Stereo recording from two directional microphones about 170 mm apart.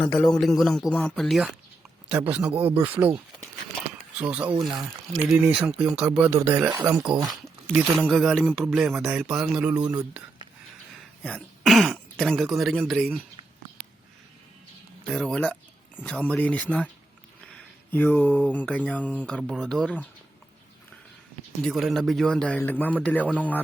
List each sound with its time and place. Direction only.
0.0 s speech: 10° left (ahead or behind); by 3.2 s 10° right (ahead or behind)
4.2 s speech: 10° right (ahead or behind)
7.3 s speech: centre (ahead or behind)
11.2 s speech: 5° left (ahead or behind)
15.0 s speech: 5° left (ahead or behind)
21.6 s speech: centre (ahead or behind)